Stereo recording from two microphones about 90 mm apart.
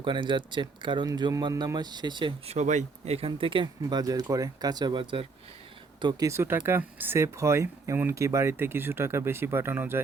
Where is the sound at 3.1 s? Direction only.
85° right.